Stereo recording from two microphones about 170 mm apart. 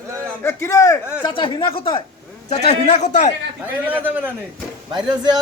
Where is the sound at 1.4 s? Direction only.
30° left (ahead or behind).